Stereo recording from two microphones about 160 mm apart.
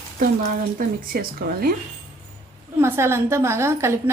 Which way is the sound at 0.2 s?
60° right (ahead or behind).